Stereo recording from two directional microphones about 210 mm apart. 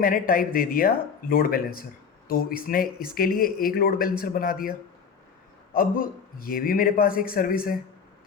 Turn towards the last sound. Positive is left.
turn(degrees=45)  # may be behind; listen again after turning